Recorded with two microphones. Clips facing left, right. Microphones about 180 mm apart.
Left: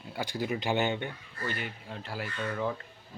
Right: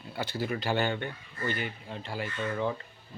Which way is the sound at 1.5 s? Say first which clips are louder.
Right 3 dB; centre (ahead or behind).